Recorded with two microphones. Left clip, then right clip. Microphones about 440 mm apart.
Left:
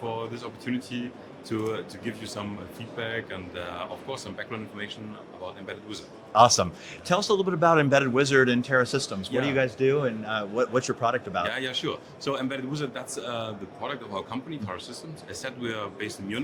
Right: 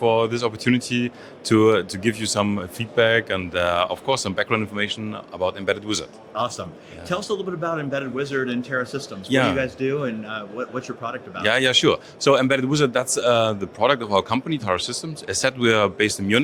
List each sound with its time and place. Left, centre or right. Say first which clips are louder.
0.0 s speech: right 14 dB; right
6.3 s a man's voice: left 8 dB; left
7.1 s speech: left 2 dB; left
7.7 s speech: left 8 dB; left
9.6 s speech: even; centre
10.2 s speech: left 3 dB; left
11.4 s speech: right 12 dB; right